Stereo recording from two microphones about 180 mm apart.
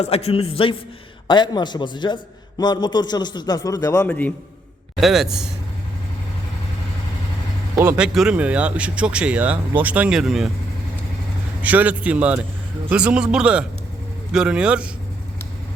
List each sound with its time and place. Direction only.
0.0 s a man's voice: 35° left (ahead or behind); by 4.1 s 20° left (ahead or behind)
4.9 s a man's voice: centre (ahead or behind)
7.9 s speech: 5° right (ahead or behind)
11.6 s a man's voice: 10° right (ahead or behind)